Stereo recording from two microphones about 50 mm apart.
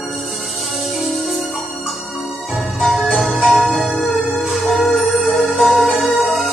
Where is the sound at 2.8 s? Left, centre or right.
Centre.